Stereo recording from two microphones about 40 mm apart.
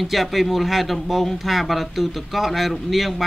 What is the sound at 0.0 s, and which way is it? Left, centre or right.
Speech, centre.